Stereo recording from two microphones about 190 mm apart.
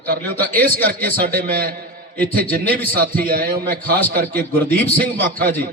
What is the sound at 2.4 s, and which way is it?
A man's voice, 50° right (ahead or behind).